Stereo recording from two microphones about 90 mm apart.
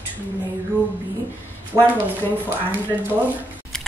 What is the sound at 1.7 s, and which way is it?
Speech, 30° right (ahead or behind).